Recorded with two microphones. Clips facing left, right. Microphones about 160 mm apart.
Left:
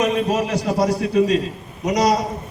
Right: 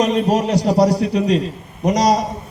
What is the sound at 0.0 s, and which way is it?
A man's voice, 35° right (ahead or behind).